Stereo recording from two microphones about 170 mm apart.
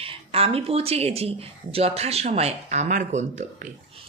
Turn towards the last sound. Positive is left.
turn(degrees=-45)  # may be behind; listen again after turning